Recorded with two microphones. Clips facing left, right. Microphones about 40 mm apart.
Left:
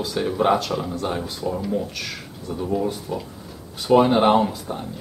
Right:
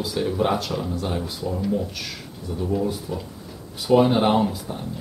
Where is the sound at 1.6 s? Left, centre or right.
Centre.